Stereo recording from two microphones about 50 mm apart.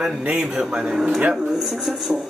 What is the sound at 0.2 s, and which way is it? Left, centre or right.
Speech, right.